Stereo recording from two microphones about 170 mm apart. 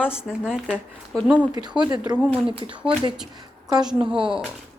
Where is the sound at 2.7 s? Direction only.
5° right (ahead or behind).